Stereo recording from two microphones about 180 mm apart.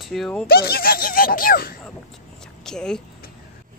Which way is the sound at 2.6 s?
5° left (ahead or behind).